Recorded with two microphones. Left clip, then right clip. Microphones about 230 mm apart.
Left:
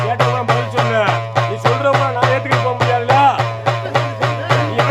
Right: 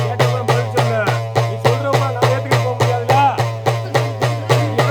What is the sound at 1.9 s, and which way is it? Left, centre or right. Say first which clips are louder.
Music: left 2 dB; right.